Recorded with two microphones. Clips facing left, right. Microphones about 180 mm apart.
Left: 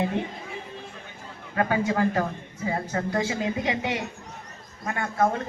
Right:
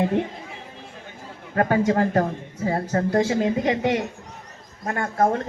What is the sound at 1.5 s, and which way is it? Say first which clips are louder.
Speech: right 4 dB; 45° right (ahead or behind).